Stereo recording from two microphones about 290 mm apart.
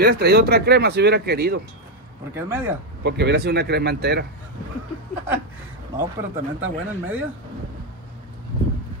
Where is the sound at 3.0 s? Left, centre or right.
Right.